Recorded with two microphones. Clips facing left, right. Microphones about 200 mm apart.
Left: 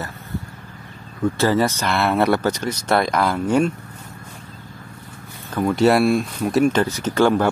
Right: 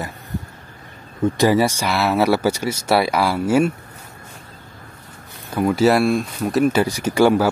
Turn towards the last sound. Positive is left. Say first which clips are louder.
# right 2 dB
turn(degrees=-10)  # may be behind; listen again after turning